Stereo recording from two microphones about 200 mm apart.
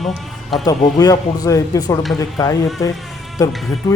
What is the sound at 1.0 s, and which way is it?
Speech, 20° left (ahead or behind).